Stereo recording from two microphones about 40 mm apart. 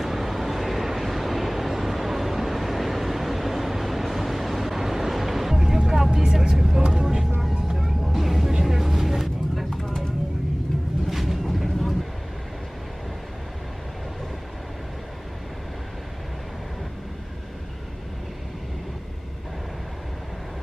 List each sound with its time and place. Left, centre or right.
0.0 s vehicle: centre
7.6 s vehicle: centre
11.1 s vehicle: centre